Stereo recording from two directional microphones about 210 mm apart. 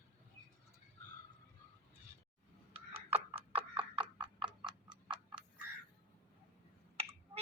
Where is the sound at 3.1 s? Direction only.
25° right (ahead or behind).